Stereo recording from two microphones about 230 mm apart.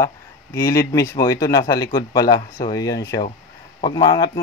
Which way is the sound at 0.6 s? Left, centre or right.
Centre.